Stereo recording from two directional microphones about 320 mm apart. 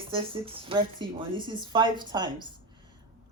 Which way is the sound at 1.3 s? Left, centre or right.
Centre.